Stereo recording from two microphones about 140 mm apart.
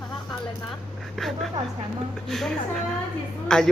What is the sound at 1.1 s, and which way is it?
Speech, centre (ahead or behind).